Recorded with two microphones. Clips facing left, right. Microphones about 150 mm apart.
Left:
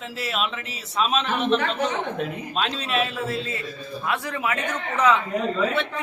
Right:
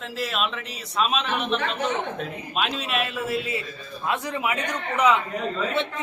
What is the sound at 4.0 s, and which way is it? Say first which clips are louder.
A man's voice: right 1 dB; 20° right (ahead or behind).